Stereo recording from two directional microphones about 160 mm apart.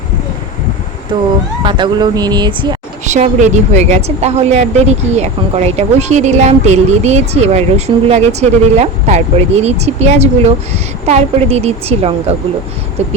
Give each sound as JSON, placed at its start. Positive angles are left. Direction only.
{"t": 1.1, "sound": "speech", "side_deg": -30}
{"t": 3.1, "sound": "a woman's voice", "side_deg": -45}